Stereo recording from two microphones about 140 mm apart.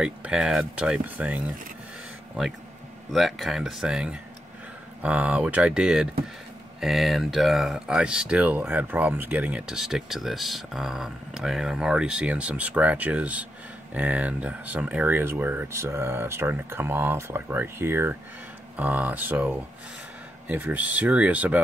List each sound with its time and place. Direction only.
0.0 s speech: 5° right (ahead or behind)
3.1 s speech: centre (ahead or behind)